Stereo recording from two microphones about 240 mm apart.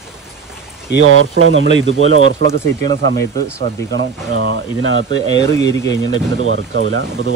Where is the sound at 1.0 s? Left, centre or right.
Right.